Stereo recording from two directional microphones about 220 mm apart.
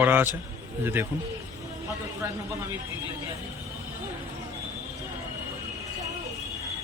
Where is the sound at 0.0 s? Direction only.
10° right (ahead or behind).